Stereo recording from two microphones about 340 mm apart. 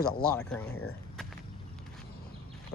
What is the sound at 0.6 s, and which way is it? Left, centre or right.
Speech, left.